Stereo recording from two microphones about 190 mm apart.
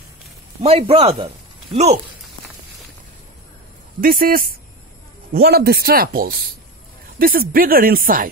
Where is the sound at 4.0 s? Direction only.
50° right (ahead or behind).